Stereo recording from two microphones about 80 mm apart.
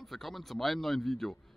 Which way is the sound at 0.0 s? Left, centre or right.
Centre.